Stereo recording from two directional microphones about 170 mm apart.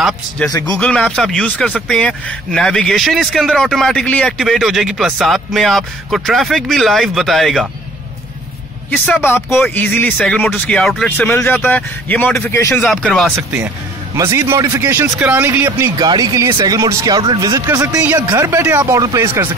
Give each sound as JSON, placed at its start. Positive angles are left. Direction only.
{"t": 0.5, "sound": "speech", "side_deg": 20}
{"t": 0.7, "sound": "speech", "side_deg": 5}
{"t": 8.9, "sound": "speech", "side_deg": 10}
{"t": 14.1, "sound": "speech", "side_deg": -15}